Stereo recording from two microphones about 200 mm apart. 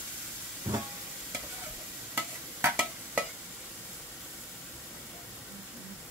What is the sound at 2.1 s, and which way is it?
Stir, 10° right (ahead or behind).